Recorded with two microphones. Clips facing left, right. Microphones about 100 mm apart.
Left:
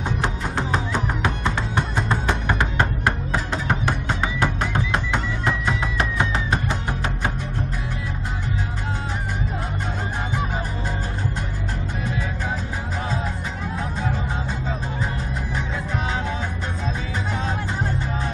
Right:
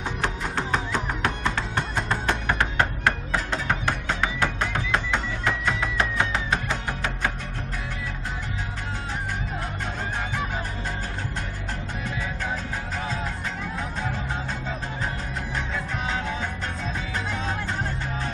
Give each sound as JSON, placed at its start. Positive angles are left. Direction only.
{"t": 0.2, "sound": "music", "side_deg": 15}